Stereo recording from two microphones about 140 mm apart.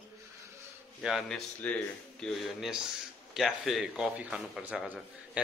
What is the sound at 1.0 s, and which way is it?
A man's voice, centre (ahead or behind).